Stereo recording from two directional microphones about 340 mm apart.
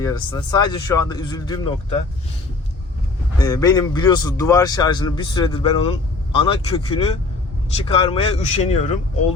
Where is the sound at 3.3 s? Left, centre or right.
Centre.